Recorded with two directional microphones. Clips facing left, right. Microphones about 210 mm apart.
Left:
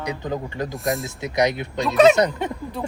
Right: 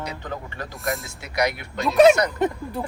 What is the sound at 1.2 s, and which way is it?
Speech, 20° left (ahead or behind).